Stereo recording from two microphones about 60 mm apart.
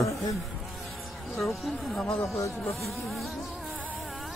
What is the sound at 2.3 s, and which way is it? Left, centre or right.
Speech, left.